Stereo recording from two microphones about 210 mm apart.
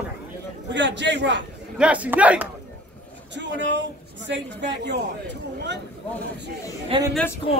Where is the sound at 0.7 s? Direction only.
60° right (ahead or behind).